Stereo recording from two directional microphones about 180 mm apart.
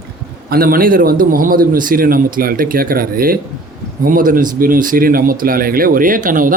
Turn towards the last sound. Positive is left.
turn(degrees=-50)  # may be behind; listen again after turning